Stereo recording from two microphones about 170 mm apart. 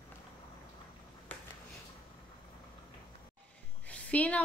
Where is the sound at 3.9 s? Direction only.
10° left (ahead or behind).